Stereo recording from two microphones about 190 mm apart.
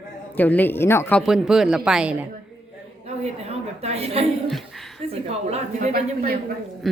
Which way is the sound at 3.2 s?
35° right (ahead or behind).